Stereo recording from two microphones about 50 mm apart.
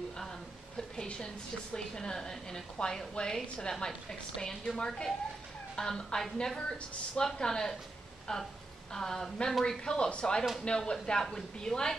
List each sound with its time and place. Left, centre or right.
0.7 s a woman's voice: centre